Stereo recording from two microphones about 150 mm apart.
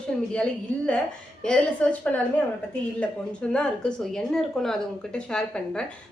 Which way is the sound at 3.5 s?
5° left (ahead or behind).